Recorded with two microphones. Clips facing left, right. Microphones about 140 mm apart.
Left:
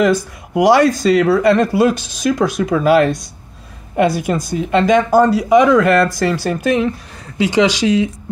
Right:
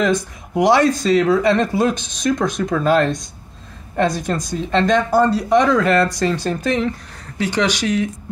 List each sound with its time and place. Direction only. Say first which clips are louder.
0.0 s speech: left 4 dB; 5° left (ahead or behind)